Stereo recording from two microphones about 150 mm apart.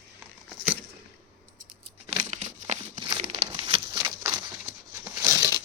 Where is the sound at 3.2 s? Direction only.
45° right (ahead or behind).